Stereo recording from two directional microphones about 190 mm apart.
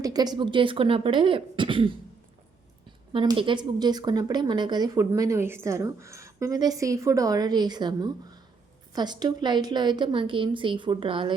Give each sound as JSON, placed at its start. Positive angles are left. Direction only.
{"t": 0.0, "sound": "a woman's voice", "side_deg": -20}
{"t": 3.1, "sound": "a woman's voice", "side_deg": -25}